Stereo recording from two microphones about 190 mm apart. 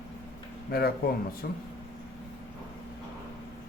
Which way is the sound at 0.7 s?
55° left (ahead or behind).